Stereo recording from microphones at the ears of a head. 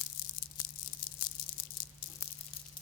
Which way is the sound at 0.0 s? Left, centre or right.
Left.